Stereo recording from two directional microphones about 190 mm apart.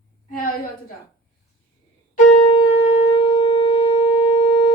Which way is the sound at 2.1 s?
35° left (ahead or behind).